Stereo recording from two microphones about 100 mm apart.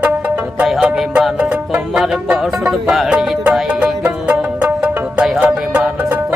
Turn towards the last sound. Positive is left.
turn(degrees=-15)  # may be behind; listen again after turning